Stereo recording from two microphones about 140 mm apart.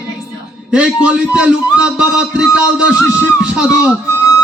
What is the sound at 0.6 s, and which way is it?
A man's voice, 5° right (ahead or behind).